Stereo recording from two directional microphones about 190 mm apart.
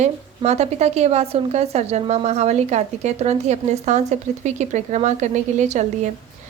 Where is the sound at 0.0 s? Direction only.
35° right (ahead or behind).